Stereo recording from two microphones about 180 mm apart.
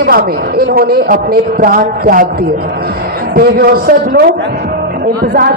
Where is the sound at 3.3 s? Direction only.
60° right (ahead or behind).